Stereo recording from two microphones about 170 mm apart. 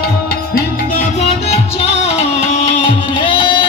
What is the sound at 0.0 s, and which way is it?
Music, 65° left (ahead or behind).